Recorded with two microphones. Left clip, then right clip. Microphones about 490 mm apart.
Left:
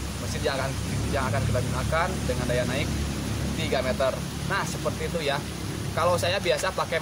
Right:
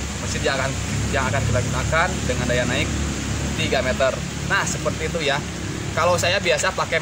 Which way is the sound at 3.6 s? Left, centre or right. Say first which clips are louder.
Right 5 dB; left.